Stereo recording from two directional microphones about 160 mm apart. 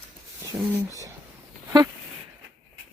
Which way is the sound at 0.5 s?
15° right (ahead or behind).